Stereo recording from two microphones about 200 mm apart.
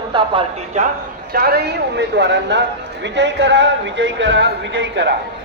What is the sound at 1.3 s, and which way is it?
A man's voice, 50° right (ahead or behind).